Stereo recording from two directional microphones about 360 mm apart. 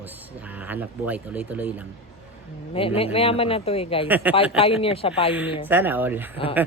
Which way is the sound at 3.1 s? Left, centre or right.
Centre.